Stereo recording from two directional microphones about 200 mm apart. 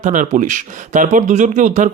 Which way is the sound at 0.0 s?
40° right (ahead or behind).